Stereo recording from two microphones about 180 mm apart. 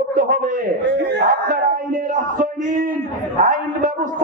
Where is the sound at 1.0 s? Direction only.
65° right (ahead or behind).